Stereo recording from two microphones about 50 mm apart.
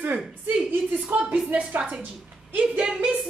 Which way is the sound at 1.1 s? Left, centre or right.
Right.